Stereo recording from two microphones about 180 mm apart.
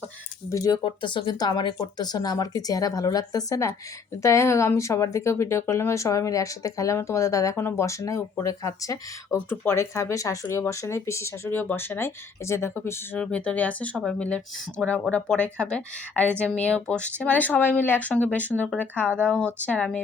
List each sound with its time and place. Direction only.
0.5 s speech: 20° left (ahead or behind)